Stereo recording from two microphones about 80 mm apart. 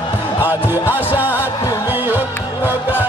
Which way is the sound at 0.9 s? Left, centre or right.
Left.